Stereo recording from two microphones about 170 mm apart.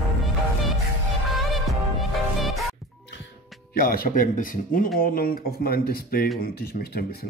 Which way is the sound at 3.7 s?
60° left (ahead or behind).